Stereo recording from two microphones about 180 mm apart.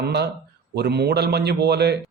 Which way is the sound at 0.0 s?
65° right (ahead or behind).